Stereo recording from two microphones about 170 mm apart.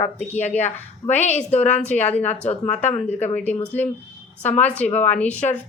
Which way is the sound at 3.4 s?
10° left (ahead or behind).